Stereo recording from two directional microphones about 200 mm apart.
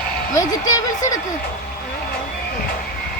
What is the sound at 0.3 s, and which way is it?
Speech, 15° left (ahead or behind).